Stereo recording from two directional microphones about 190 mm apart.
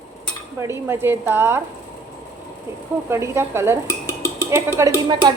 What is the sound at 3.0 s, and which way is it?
A woman's voice, 15° right (ahead or behind).